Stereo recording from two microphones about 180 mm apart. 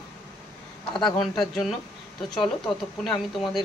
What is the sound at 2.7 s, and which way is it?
Speech, centre (ahead or behind).